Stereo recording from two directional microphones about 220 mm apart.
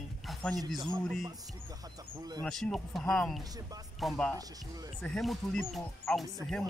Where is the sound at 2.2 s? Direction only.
15° right (ahead or behind).